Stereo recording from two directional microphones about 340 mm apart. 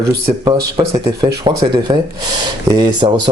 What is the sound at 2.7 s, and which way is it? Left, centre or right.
Speech, centre.